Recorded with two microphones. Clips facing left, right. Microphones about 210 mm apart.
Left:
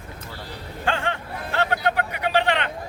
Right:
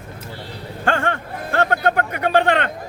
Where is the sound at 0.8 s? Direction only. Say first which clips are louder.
Right 5 dB; 50° right (ahead or behind).